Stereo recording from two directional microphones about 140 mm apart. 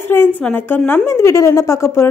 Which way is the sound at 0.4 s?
10° left (ahead or behind).